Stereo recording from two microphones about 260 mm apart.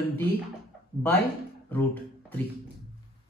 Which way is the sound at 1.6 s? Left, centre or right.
Centre.